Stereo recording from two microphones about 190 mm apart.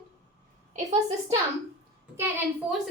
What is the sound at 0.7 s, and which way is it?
Speech, 35° right (ahead or behind).